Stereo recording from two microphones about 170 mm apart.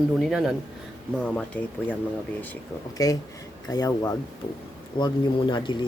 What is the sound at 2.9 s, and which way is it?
Speech, 20° left (ahead or behind).